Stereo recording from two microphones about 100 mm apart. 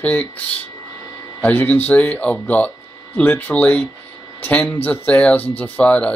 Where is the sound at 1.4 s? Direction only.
15° left (ahead or behind).